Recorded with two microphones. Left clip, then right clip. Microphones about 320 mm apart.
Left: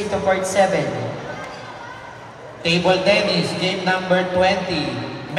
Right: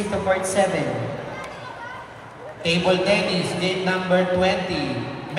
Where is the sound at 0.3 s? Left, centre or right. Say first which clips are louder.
Left 3 dB; left.